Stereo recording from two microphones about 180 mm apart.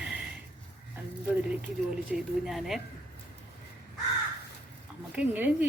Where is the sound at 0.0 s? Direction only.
5° right (ahead or behind).